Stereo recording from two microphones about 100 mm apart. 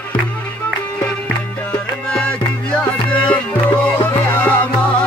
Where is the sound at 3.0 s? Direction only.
10° left (ahead or behind).